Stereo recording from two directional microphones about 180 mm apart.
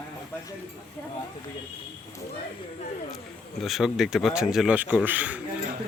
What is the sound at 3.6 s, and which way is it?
Speech, centre (ahead or behind).